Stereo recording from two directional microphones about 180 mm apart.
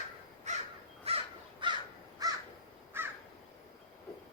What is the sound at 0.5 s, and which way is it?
Crow, 40° right (ahead or behind).